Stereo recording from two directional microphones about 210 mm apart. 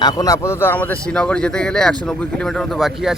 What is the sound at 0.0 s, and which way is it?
Speech, 20° left (ahead or behind).